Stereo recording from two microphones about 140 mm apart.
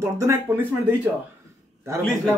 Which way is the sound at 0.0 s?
20° right (ahead or behind).